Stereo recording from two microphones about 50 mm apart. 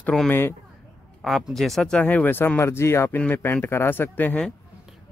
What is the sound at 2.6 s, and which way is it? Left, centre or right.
Speech, left.